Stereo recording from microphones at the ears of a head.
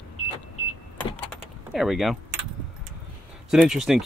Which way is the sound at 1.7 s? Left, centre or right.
Centre.